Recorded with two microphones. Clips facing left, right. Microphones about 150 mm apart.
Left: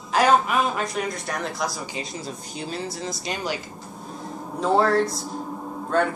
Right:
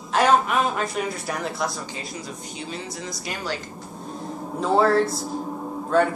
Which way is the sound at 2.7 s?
30° left (ahead or behind).